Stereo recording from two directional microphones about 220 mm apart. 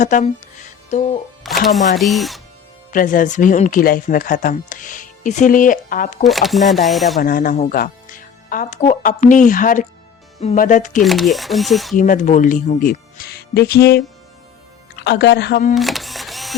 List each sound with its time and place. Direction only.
0.0 s music: 35° left (ahead or behind)
1.5 s single-lens reflex camera: centre (ahead or behind)
2.0 s speech: centre (ahead or behind)
2.9 s speech: 40° left (ahead or behind)
6.2 s speech: centre (ahead or behind)
7.2 s speech: 40° left (ahead or behind)
11.0 s speech: centre (ahead or behind)
11.9 s speech: 35° left (ahead or behind)
15.7 s camera: centre (ahead or behind)